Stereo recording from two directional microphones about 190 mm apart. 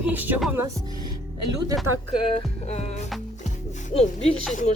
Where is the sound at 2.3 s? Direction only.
35° left (ahead or behind).